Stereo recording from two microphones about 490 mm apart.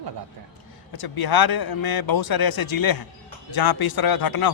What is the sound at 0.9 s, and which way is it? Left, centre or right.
Speech, left.